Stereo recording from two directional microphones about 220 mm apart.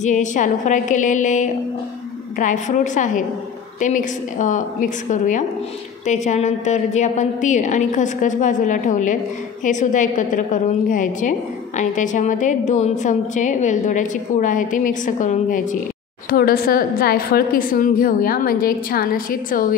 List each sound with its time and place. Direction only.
0.0 s a woman's voice: 35° left (ahead or behind)